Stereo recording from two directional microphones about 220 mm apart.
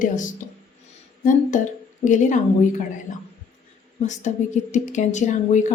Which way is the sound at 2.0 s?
35° left (ahead or behind).